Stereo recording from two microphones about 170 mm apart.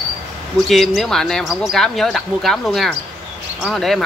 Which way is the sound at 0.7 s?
Centre (ahead or behind).